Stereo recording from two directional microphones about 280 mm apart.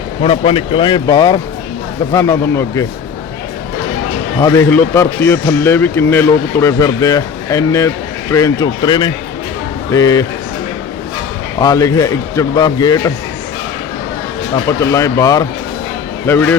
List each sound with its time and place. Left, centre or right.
0.2 s speech: left
4.4 s speech: centre
11.6 s speech: centre
14.5 s speech: centre